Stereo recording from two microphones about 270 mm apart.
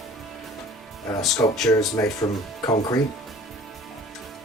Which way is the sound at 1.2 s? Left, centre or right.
Centre.